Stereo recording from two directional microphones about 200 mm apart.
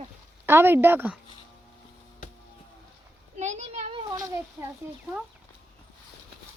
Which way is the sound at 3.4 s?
35° right (ahead or behind).